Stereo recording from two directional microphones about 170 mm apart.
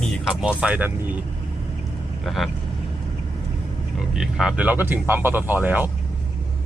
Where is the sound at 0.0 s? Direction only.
5° right (ahead or behind).